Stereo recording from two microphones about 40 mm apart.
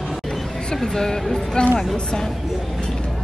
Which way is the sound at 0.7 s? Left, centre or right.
Centre.